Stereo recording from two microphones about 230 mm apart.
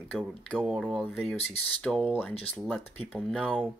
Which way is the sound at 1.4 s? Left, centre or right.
Left.